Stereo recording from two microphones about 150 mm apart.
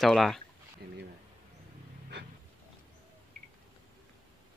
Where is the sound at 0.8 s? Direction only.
90° right.